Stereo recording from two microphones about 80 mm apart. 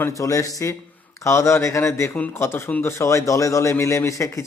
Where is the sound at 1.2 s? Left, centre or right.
Left.